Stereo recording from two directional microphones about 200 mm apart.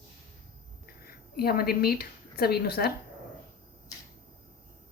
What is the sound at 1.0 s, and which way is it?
A woman's voice, 50° left (ahead or behind).